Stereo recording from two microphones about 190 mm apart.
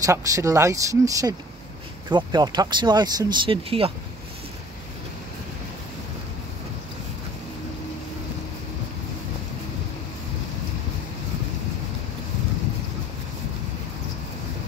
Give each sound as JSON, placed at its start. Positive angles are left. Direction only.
{"t": 0.0, "sound": "speech", "side_deg": -15}